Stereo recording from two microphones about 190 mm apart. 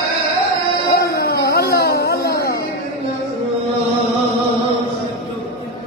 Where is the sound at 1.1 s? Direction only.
55° left (ahead or behind).